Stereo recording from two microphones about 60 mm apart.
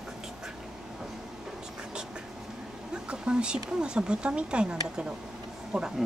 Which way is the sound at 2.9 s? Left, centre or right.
Centre.